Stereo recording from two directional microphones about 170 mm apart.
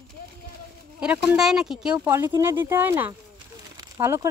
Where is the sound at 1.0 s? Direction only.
5° right (ahead or behind).